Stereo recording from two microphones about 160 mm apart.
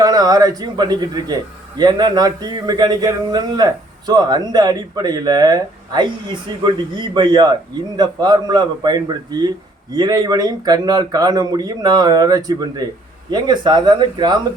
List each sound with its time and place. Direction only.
0.0 s speech: 25° right (ahead or behind)